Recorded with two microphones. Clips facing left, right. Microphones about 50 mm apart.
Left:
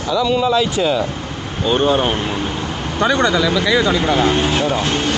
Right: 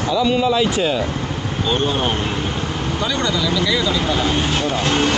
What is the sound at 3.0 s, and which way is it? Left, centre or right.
Speech, left.